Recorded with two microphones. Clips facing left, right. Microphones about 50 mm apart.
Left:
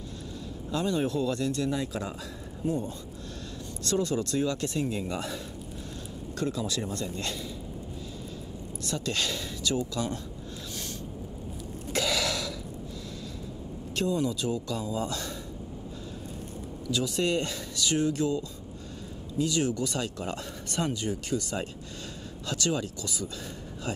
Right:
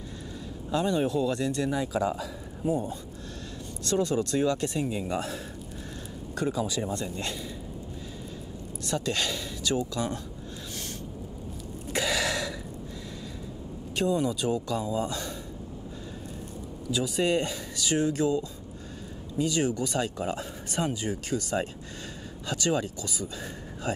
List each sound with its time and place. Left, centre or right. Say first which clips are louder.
0.7 s speech: right 2 dB; centre
2.6 s speech: right 2 dB; centre
3.8 s speech: right 2 dB; right
4.8 s speech: right 1 dB; centre
6.3 s speech: right 2 dB; centre
8.8 s speech: right 2 dB; right
11.9 s throat clearing: right 1 dB; centre
13.9 s speech: right 2 dB; centre
16.9 s speech: right 2 dB; centre